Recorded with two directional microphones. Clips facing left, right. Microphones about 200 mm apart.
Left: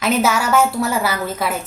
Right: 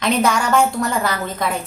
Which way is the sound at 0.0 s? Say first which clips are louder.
Even; 5° left (ahead or behind).